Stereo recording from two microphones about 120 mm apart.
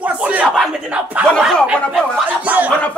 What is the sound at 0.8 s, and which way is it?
Speech, 10° right (ahead or behind).